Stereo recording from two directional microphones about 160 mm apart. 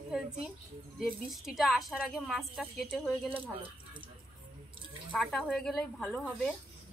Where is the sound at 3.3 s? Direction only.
30° right (ahead or behind).